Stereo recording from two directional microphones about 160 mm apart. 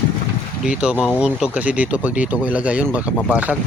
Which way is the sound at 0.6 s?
5° right (ahead or behind).